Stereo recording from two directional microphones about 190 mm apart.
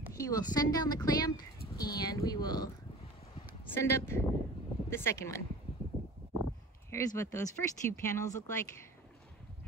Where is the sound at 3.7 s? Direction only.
15° left (ahead or behind).